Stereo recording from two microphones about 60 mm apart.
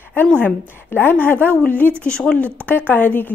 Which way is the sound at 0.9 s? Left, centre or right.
Left.